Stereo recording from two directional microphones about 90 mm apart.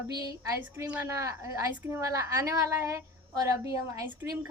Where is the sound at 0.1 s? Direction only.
45° right (ahead or behind).